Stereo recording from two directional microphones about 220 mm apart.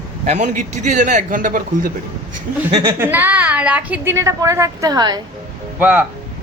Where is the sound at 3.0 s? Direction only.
10° right (ahead or behind).